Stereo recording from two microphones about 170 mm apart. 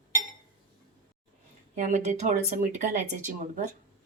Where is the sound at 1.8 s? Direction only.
45° right (ahead or behind).